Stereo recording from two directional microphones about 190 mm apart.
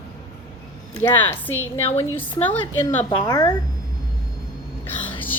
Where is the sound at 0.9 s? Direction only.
10° left (ahead or behind).